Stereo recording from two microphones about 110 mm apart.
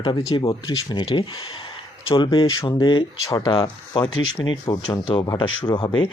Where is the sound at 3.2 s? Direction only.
35° left (ahead or behind).